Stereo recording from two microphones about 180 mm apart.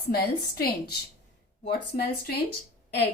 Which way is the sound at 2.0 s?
60° left (ahead or behind).